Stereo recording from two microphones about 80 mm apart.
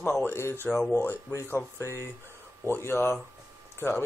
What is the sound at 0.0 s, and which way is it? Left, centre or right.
Speech, left.